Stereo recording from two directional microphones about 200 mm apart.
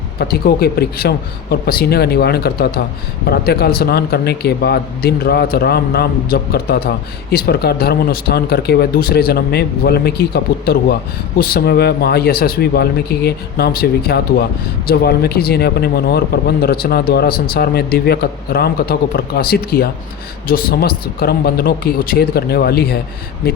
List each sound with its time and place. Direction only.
0.2 s a man's voice: 50° left (ahead or behind)